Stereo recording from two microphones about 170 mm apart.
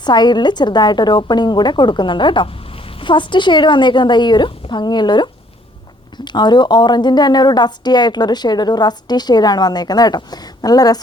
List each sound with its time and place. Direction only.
0.0 s a woman's voice: 25° left (ahead or behind)